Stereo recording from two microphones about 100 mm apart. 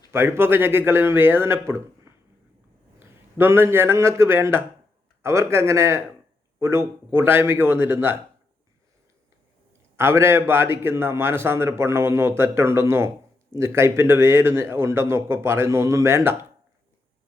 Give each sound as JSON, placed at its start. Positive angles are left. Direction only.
{"t": 0.1, "sound": "a man's voice", "side_deg": -25}
{"t": 3.3, "sound": "a man's voice", "side_deg": -25}
{"t": 10.0, "sound": "a man's voice", "side_deg": -25}